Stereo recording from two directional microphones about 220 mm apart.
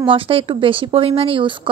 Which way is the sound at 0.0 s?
25° right (ahead or behind).